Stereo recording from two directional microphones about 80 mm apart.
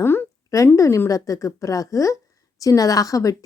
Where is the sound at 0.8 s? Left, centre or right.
Left.